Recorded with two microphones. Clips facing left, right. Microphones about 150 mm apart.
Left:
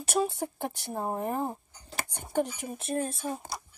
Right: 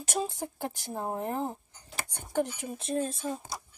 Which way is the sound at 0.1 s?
65° left (ahead or behind).